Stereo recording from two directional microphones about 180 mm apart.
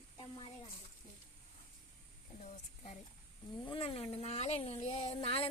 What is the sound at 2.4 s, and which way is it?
Speech, 40° left (ahead or behind).